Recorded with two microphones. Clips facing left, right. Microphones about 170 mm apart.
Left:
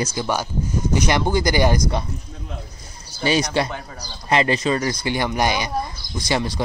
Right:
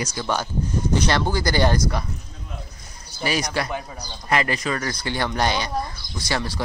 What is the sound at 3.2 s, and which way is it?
A man's voice, 25° left (ahead or behind).